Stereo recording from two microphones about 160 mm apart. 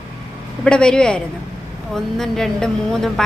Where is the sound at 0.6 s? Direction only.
5° left (ahead or behind).